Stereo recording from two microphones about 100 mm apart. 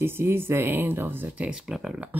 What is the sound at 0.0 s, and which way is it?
Speech, 25° right (ahead or behind).